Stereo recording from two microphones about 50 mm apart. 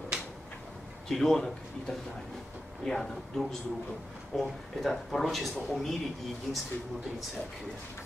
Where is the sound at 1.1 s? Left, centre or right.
Centre.